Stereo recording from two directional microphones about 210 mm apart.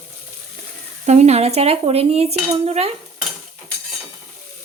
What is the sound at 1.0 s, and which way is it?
Dishes, 30° right (ahead or behind).